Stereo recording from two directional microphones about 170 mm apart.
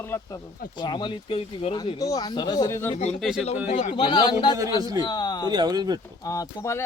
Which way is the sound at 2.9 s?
40° left (ahead or behind).